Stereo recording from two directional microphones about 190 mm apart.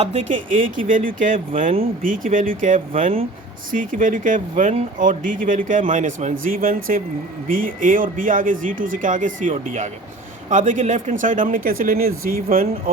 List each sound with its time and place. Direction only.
0.0 s speech: 35° right (ahead or behind)